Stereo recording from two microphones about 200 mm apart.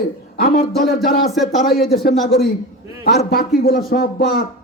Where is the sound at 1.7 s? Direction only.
50° left (ahead or behind).